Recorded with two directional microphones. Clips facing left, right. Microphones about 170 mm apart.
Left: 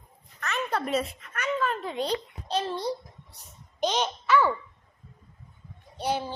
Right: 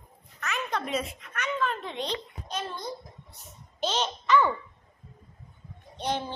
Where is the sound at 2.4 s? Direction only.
30° left (ahead or behind).